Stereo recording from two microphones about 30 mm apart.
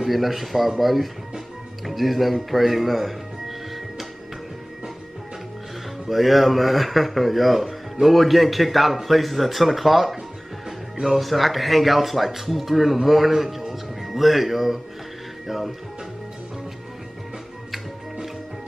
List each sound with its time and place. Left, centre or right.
0.0 s speech: centre
6.0 s speech: centre
11.1 s speech: centre